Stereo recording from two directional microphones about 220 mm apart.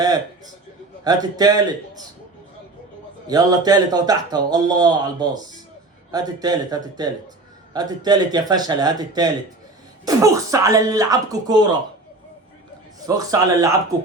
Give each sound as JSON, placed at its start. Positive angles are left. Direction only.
{"t": 1.0, "sound": "speech", "side_deg": -15}
{"t": 3.2, "sound": "speech", "side_deg": -15}
{"t": 13.1, "sound": "speech", "side_deg": -15}